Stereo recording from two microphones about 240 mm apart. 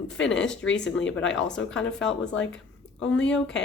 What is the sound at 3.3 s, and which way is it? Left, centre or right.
Speech, centre.